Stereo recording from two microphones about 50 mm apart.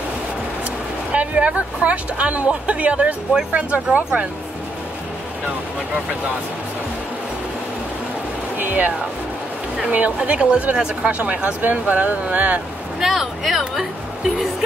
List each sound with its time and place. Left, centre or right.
1.1 s speech: right
8.5 s speech: right
13.0 s speech: centre